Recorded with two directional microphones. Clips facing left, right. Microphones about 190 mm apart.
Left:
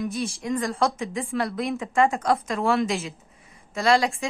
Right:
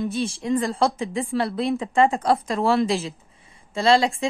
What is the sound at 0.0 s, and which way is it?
A woman's voice, 30° right (ahead or behind).